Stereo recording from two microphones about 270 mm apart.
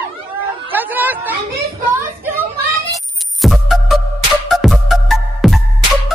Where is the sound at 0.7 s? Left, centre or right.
Centre.